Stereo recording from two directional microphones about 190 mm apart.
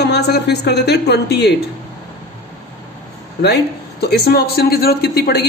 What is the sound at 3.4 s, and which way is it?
A man's voice, 60° left (ahead or behind).